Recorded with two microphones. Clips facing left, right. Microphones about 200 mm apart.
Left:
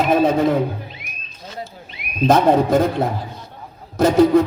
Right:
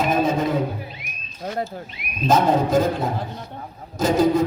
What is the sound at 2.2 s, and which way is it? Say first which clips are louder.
Music: left 4 dB; 60° left (ahead or behind).